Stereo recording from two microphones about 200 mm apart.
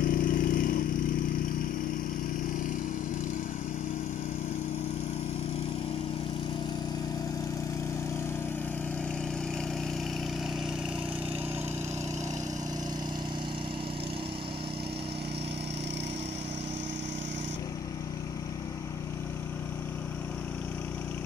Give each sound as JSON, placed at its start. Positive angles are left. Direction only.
{"t": 0.0, "sound": "vehicle", "side_deg": 45}